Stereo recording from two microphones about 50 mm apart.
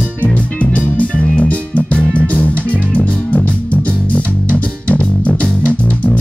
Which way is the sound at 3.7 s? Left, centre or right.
Left.